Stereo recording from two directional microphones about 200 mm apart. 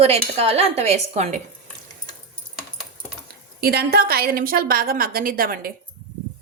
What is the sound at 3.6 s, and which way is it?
Speech, 50° right (ahead or behind).